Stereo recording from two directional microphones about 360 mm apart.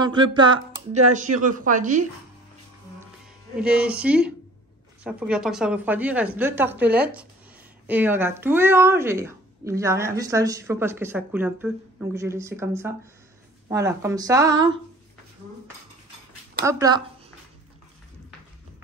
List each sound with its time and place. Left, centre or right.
0.0 s a woman's voice: centre
3.5 s a woman's voice: centre
16.6 s speech: centre